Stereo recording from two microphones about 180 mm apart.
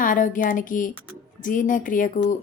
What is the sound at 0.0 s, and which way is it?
Speech, 45° left (ahead or behind).